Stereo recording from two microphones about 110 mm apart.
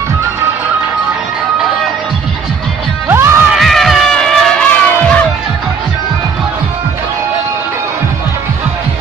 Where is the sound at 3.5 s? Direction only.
Centre (ahead or behind).